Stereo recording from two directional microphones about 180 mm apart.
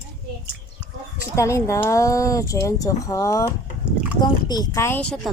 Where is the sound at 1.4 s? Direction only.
15° left (ahead or behind).